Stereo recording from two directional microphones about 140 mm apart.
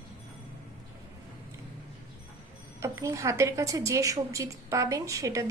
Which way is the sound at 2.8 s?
20° right (ahead or behind).